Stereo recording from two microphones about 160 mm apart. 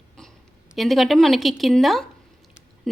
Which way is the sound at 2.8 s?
Centre (ahead or behind).